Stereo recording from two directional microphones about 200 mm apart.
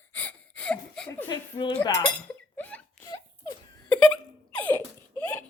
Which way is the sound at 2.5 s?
10° left (ahead or behind).